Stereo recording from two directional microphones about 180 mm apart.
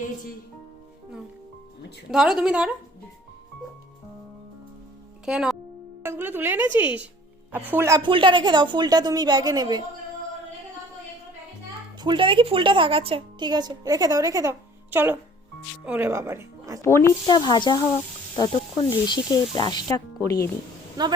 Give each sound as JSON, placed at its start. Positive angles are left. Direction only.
{"t": 2.0, "sound": "a woman's voice", "side_deg": -5}
{"t": 5.2, "sound": "speech", "side_deg": -5}
{"t": 8.0, "sound": "a woman's voice", "side_deg": -25}
{"t": 11.9, "sound": "a woman's voice", "side_deg": -25}
{"t": 16.8, "sound": "speech", "side_deg": 15}
{"t": 21.0, "sound": "a woman's voice", "side_deg": -20}